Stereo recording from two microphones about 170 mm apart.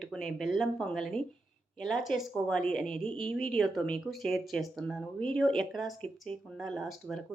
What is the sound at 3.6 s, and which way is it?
Speech, centre (ahead or behind).